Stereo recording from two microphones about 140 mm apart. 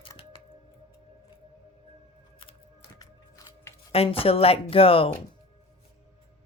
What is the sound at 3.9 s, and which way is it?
Speech, 45° left (ahead or behind).